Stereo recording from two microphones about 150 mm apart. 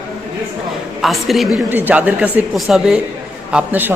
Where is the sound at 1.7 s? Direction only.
10° right (ahead or behind).